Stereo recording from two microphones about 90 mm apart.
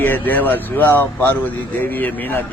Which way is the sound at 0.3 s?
20° left (ahead or behind).